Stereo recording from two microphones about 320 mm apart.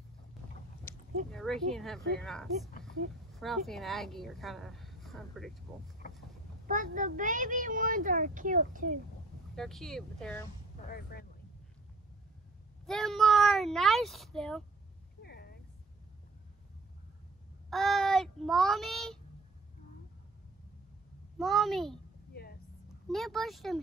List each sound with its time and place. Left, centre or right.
0.9 s a sound: centre
1.3 s a woman's voice: centre
6.7 s a woman's voice: right
9.6 s a woman's voice: centre
10.9 s speech: left
12.8 s a woman's voice: centre
15.2 s a sound: left
17.6 s child singing: centre
21.4 s a woman's voice: centre
22.3 s a sound: left
23.0 s a woman's voice: centre